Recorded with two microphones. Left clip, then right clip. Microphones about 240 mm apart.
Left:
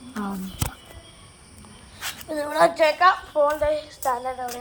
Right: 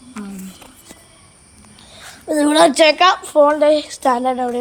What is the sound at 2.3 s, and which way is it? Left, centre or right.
Speech, right.